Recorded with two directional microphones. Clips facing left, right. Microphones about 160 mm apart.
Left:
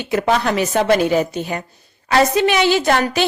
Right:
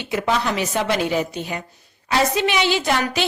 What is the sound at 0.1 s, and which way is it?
A woman's voice, 50° left (ahead or behind).